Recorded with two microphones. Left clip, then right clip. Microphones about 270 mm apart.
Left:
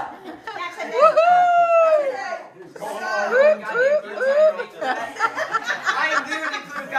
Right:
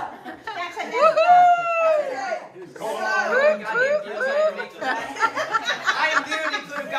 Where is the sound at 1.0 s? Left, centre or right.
Centre.